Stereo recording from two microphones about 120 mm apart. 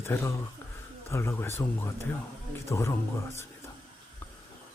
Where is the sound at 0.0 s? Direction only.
20° left (ahead or behind).